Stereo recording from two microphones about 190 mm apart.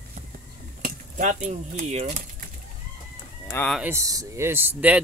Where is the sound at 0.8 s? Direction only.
45° right (ahead or behind).